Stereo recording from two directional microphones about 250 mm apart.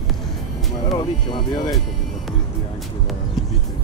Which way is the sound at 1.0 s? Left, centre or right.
Centre.